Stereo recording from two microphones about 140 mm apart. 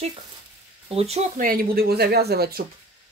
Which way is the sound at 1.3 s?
90° right.